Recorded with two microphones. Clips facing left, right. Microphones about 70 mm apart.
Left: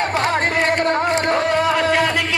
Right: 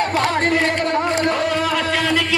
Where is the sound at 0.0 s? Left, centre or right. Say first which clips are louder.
Even; left.